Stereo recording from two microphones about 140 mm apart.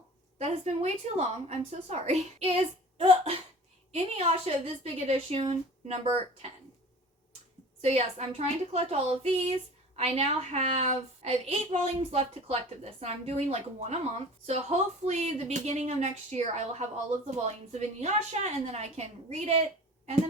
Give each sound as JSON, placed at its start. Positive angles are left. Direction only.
{"t": 0.3, "sound": "a woman's voice", "side_deg": -50}
{"t": 3.0, "sound": "cough", "side_deg": -40}
{"t": 3.9, "sound": "a woman's voice", "side_deg": -45}
{"t": 7.8, "sound": "a woman's voice", "side_deg": -50}